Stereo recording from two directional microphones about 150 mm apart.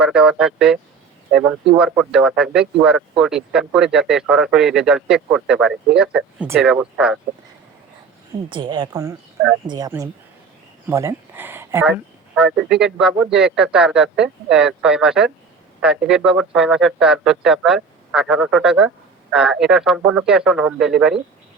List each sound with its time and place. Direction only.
0.0 s speech: 5° right (ahead or behind)
8.4 s a woman's voice: 30° right (ahead or behind); by 21.2 s 5° right (ahead or behind)